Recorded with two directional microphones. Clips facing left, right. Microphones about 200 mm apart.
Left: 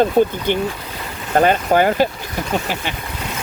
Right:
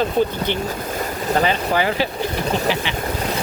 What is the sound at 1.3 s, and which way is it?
Speech, 50° left (ahead or behind).